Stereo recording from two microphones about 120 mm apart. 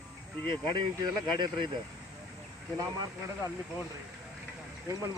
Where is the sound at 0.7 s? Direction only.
40° right (ahead or behind).